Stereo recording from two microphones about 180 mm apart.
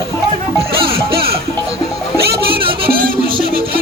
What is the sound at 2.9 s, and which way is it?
Music, 55° right (ahead or behind).